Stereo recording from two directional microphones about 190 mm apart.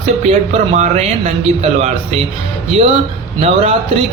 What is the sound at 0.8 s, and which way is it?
Speech, 40° right (ahead or behind).